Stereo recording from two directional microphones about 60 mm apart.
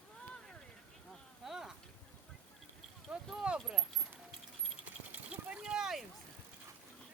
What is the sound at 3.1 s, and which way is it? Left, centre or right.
Speech, right.